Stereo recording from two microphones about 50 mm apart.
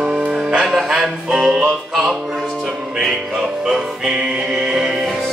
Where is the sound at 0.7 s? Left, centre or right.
Centre.